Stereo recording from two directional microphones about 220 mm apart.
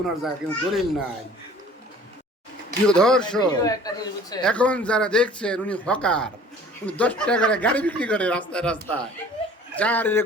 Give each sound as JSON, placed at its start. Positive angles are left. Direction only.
{"t": 0.2, "sound": "speech", "side_deg": 0}
{"t": 2.8, "sound": "speech", "side_deg": 5}
{"t": 3.4, "sound": "speech", "side_deg": 20}
{"t": 4.4, "sound": "speech", "side_deg": 5}